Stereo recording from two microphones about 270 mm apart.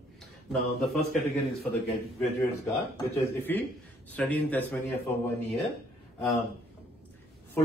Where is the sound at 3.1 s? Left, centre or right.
Centre.